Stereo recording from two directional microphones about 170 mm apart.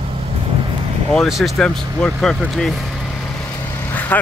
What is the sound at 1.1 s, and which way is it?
Speech, centre (ahead or behind).